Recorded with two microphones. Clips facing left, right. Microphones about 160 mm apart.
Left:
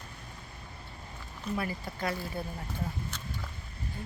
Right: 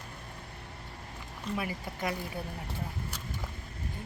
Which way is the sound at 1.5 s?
15° right (ahead or behind).